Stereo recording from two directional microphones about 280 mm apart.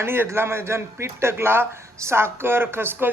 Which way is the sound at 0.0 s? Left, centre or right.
Centre.